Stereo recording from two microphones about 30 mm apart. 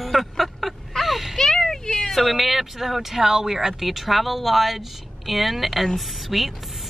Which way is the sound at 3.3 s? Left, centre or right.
Centre.